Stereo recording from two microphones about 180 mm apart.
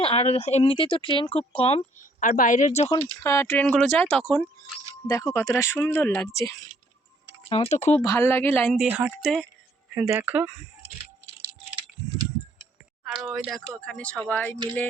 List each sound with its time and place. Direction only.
0.0 s speech: 35° left (ahead or behind)
2.2 s speech: 45° left (ahead or behind)
3.0 s speech: 15° left (ahead or behind)
7.5 s speech: 35° left (ahead or behind)
8.0 s speech: 15° left (ahead or behind)
8.9 s speech: 10° right (ahead or behind)
13.1 s speech: centre (ahead or behind)